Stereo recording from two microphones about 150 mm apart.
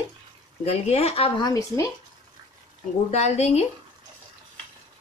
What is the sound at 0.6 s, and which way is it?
Speech, 45° left (ahead or behind).